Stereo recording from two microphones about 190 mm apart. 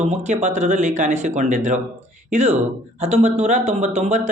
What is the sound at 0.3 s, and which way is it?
Speech, 40° right (ahead or behind).